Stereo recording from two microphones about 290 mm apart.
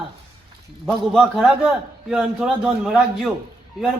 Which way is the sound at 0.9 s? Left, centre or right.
Centre.